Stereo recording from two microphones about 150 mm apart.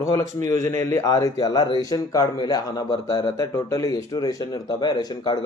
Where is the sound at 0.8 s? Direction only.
20° left (ahead or behind).